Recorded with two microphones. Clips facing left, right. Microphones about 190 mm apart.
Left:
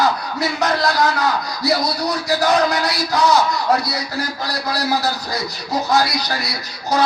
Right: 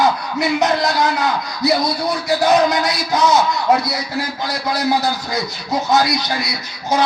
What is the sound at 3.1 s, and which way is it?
Music, 20° right (ahead or behind).